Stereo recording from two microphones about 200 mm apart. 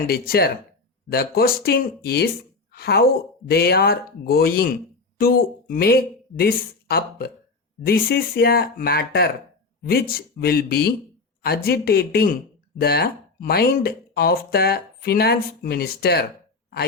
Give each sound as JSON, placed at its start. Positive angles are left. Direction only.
{"t": 0.1, "sound": "a woman's voice", "side_deg": 50}